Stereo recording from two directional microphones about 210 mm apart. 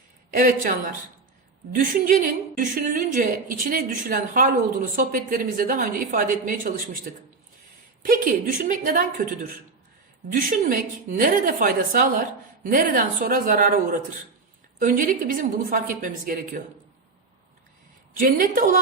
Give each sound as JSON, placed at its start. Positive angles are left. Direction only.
{"t": 0.3, "sound": "a woman's voice", "side_deg": -40}
{"t": 1.7, "sound": "a woman's voice", "side_deg": -40}
{"t": 10.3, "sound": "a woman's voice", "side_deg": -40}